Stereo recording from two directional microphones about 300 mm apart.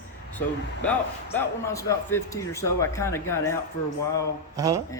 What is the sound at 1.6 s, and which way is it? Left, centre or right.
Speech, centre.